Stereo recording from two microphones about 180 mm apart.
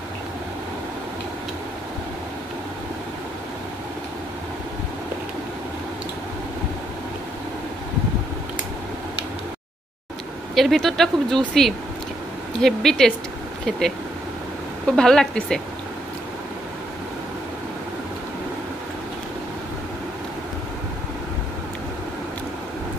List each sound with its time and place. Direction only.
10.5 s speech: centre (ahead or behind)
15.0 s speech: 5° left (ahead or behind)